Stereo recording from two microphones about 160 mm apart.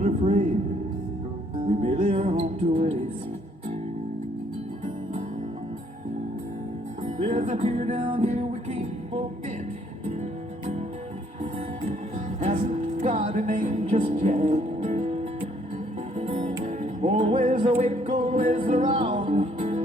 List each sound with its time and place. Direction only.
0.0 s a sound: 45° right (ahead or behind)
1.5 s music: 35° right (ahead or behind)
7.2 s music: 50° right (ahead or behind)
12.4 s music: 45° right (ahead or behind)
17.3 s music: 50° right (ahead or behind)